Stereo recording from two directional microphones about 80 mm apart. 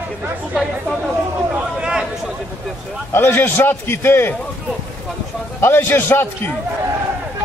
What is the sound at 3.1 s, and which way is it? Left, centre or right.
A man's voice, left.